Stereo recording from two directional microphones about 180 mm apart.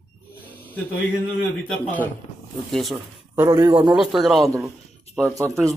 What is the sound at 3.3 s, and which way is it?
Speech, 15° right (ahead or behind).